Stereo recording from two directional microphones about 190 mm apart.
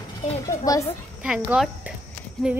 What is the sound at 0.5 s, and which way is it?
Speech, 15° left (ahead or behind).